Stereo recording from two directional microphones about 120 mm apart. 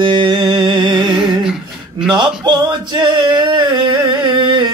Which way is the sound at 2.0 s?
35° right (ahead or behind).